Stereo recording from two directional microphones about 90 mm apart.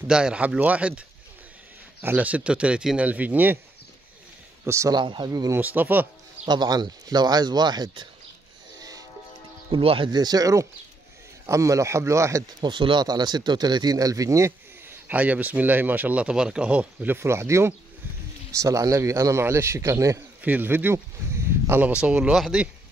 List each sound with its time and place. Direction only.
0.1 s speech: 10° right (ahead or behind)
4.6 s a man's voice: 35° right (ahead or behind)
4.9 s speech: 55° right (ahead or behind)
5.6 s speech: 20° right (ahead or behind)
6.4 s speech: 50° right (ahead or behind)
9.7 s speech: 75° right (ahead or behind)
10.1 s a man's voice: 45° right (ahead or behind)
12.5 s speech: 60° right (ahead or behind); by 15.0 s 35° right (ahead or behind)
15.0 s a man's voice: 15° right (ahead or behind); by 20.2 s 35° right (ahead or behind)
20.4 s speech: 20° right (ahead or behind)
21.8 s speech: 10° right (ahead or behind)